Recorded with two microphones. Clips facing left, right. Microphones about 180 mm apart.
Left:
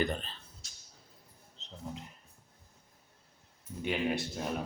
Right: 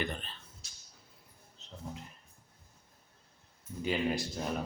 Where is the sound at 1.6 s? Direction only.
20° left (ahead or behind).